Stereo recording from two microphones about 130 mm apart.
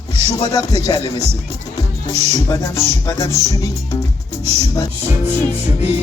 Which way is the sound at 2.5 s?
20° left (ahead or behind).